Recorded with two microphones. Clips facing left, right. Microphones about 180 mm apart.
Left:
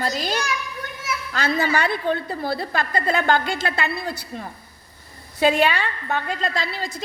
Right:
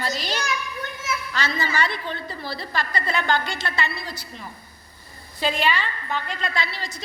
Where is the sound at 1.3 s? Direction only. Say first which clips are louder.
Left 5 dB; 55° left (ahead or behind).